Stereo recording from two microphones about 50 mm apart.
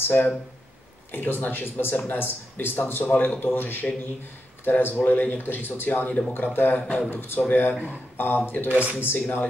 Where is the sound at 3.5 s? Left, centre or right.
Left.